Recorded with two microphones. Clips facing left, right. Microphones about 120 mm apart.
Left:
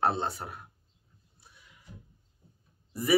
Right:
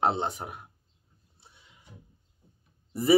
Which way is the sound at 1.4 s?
25° right (ahead or behind).